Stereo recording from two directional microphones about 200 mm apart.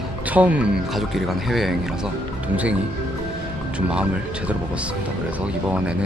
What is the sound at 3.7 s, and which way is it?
Speech, 5° right (ahead or behind).